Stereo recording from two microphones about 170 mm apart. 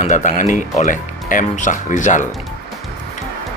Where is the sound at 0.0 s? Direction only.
45° left (ahead or behind).